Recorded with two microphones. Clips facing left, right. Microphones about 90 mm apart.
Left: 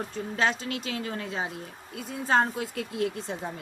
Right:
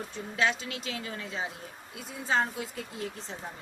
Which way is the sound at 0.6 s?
45° left (ahead or behind).